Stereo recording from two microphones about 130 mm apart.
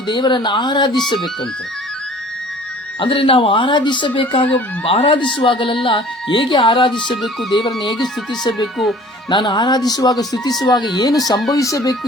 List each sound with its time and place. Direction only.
0.1 s speech: 35° left (ahead or behind)
3.0 s speech: 40° left (ahead or behind)
8.3 s speech: 30° left (ahead or behind)